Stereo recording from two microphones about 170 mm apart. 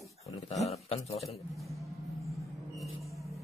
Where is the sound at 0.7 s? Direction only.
40° left (ahead or behind).